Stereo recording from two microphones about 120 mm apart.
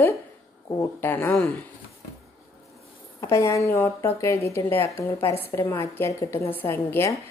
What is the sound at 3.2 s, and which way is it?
A woman's voice, 25° left (ahead or behind).